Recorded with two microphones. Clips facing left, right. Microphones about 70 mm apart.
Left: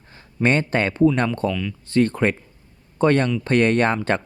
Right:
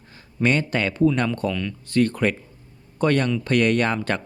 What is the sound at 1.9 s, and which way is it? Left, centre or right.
Speech, left.